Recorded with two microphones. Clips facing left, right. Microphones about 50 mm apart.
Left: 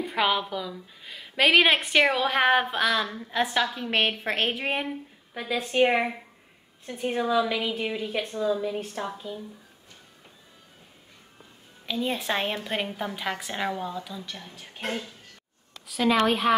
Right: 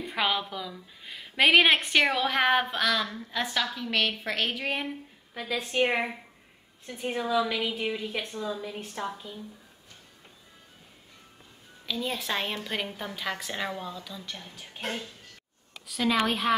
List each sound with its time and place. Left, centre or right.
0.1 s a woman's voice: centre
6.9 s a woman's voice: centre
11.8 s a woman's voice: centre
15.9 s a woman's voice: centre